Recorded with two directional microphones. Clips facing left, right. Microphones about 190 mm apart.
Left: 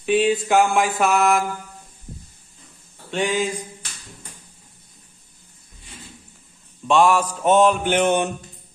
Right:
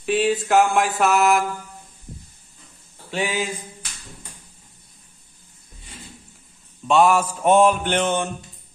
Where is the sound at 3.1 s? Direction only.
5° right (ahead or behind).